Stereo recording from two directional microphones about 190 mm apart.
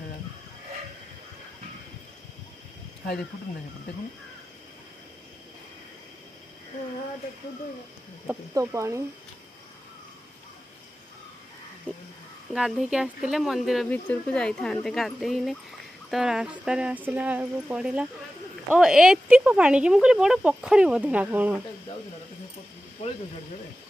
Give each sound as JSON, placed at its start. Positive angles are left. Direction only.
{"t": 8.5, "sound": "speech", "side_deg": -15}
{"t": 11.9, "sound": "crow", "side_deg": -5}
{"t": 12.5, "sound": "speech", "side_deg": 0}